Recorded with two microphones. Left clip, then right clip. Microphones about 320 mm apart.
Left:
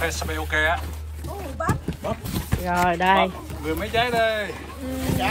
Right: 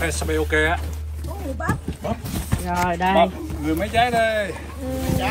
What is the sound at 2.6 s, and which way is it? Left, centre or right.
Speech, left.